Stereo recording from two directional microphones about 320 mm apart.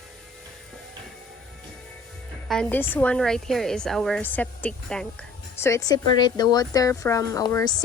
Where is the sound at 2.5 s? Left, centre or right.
Centre.